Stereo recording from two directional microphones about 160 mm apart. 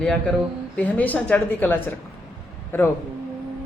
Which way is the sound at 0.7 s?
10° left (ahead or behind).